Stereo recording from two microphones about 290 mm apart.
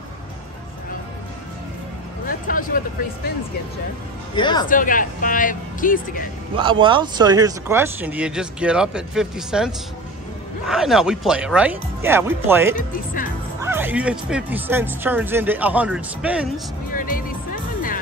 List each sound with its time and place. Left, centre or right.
2.2 s a sound: left
4.4 s speech: centre
4.6 s speech: left
6.5 s speech: centre
12.7 s speech: left
13.6 s speech: centre
16.9 s speech: left